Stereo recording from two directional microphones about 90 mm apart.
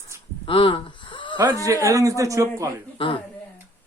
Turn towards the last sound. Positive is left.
turn(degrees=80)